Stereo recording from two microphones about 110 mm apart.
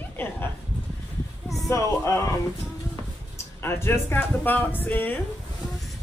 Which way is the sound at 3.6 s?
20° left (ahead or behind).